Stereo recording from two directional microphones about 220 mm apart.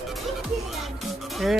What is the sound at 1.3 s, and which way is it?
Music, centre (ahead or behind).